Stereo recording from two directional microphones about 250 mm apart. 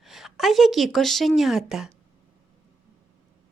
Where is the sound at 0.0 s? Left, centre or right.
Centre.